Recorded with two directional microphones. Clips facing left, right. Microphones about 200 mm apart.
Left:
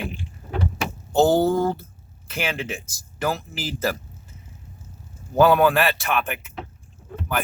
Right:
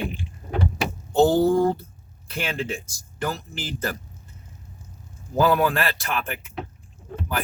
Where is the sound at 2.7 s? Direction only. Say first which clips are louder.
Right 1 dB; 5° left (ahead or behind).